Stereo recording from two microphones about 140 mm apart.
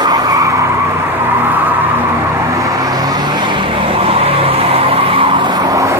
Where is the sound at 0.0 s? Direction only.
25° right (ahead or behind).